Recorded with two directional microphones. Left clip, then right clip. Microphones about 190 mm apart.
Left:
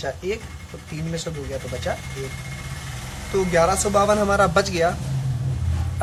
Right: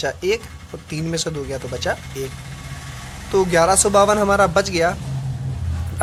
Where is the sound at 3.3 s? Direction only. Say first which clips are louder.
Right 4 dB; 45° right (ahead or behind).